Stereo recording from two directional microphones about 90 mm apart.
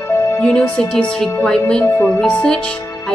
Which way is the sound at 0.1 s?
40° left (ahead or behind).